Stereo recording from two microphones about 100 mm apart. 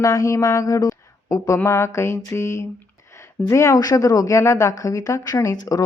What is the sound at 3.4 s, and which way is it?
A woman's voice, 30° left (ahead or behind).